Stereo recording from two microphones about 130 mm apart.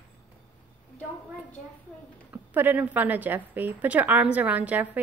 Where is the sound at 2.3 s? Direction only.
15° right (ahead or behind).